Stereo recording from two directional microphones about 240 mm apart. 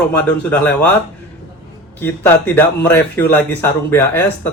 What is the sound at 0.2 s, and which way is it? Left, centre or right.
Speech, centre.